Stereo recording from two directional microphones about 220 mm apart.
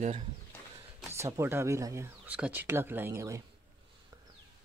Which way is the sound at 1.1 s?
15° right (ahead or behind).